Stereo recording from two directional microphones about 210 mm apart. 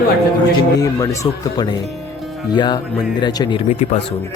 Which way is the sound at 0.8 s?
15° left (ahead or behind).